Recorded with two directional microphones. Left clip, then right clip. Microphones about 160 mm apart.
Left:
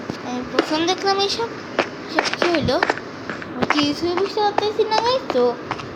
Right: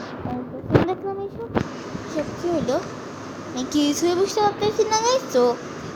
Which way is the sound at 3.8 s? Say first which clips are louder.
Even; 20° right (ahead or behind).